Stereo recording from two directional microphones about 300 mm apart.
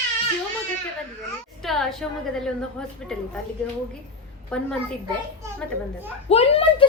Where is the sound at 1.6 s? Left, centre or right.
Centre.